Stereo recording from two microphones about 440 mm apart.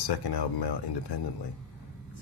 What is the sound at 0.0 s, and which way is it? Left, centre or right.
Speech, left.